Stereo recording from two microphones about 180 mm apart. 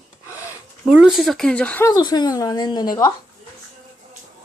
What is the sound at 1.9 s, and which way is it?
Speech, 25° left (ahead or behind).